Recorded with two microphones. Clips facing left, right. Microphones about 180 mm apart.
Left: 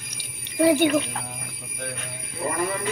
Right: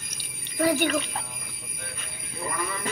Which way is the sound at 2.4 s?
35° left (ahead or behind).